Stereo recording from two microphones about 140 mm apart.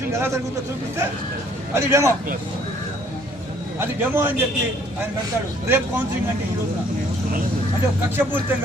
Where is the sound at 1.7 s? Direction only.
20° right (ahead or behind).